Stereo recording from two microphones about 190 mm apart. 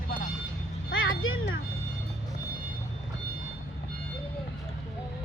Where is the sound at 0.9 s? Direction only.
85° left.